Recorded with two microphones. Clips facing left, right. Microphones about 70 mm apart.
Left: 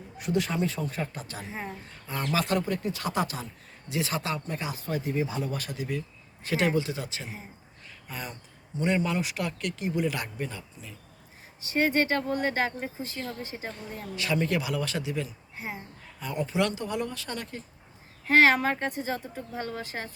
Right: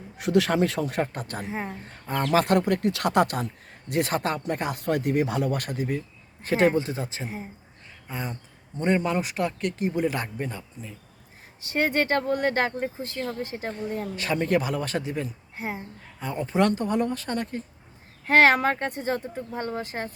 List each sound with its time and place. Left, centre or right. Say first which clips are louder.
0.2 s speech: right 6 dB; right
1.1 s speech: right 6 dB; right
8.8 s speech: right 3 dB; right
11.6 s speech: right 1 dB; right
18.3 s speech: right 2 dB; right